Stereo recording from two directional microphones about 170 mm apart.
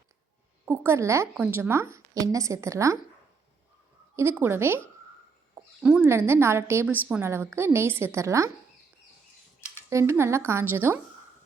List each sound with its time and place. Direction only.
0.6 s a woman's voice: 15° right (ahead or behind)
4.1 s a woman's voice: 15° right (ahead or behind)
9.9 s a woman's voice: 15° right (ahead or behind)